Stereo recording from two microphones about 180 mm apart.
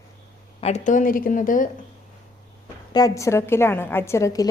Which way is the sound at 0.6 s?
40° left (ahead or behind).